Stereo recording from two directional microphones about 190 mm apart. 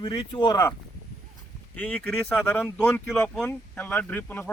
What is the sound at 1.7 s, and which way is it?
Speech, 5° left (ahead or behind).